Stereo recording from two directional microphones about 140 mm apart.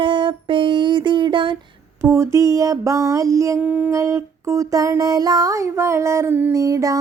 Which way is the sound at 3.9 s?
20° right (ahead or behind).